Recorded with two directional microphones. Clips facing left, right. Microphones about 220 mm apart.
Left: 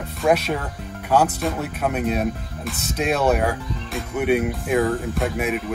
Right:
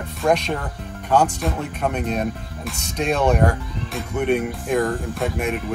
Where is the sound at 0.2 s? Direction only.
5° left (ahead or behind).